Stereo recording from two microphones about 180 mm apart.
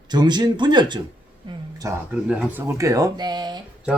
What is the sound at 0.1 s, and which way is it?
Speech, 25° right (ahead or behind).